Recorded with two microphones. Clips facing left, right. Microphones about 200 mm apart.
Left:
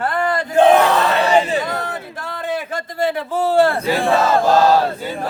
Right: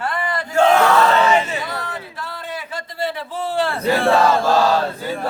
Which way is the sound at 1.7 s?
50° left (ahead or behind).